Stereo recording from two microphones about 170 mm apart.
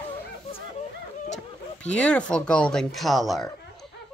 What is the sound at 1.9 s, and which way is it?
Speech, 5° left (ahead or behind).